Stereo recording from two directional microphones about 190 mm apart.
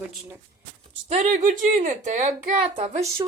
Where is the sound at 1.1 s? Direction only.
35° right (ahead or behind).